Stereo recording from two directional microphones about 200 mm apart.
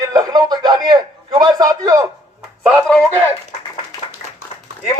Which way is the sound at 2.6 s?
Centre (ahead or behind).